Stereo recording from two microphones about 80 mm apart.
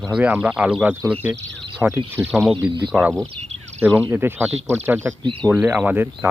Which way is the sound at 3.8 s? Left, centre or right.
Right.